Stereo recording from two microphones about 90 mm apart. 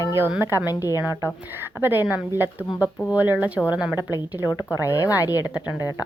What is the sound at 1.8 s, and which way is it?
A woman's voice, 20° right (ahead or behind).